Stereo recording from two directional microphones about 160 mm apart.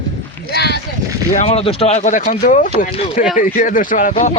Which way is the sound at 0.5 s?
90° left.